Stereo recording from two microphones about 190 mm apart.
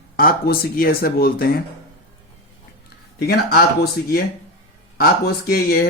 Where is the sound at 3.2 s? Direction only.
55° left (ahead or behind).